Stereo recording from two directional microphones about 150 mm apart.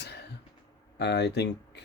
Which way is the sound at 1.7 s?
90° left.